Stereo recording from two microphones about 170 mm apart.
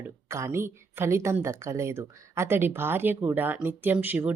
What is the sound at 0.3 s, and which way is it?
A woman's voice, 15° right (ahead or behind).